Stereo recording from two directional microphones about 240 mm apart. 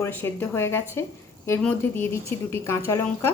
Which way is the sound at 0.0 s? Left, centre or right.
Centre.